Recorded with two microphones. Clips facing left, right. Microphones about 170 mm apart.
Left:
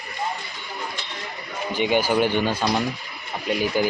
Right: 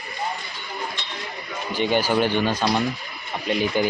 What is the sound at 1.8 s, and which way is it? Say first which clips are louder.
Speech: even; 10° left (ahead or behind).